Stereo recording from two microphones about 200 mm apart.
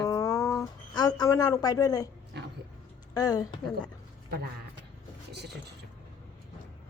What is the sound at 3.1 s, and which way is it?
Speech, 20° left (ahead or behind).